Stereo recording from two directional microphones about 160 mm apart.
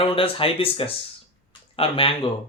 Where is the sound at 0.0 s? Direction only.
35° left (ahead or behind).